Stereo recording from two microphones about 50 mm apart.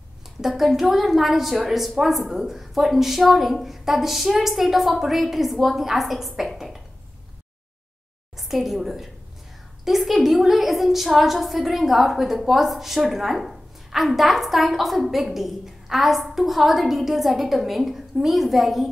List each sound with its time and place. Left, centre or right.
0.4 s a woman's voice: centre
8.4 s a woman's voice: centre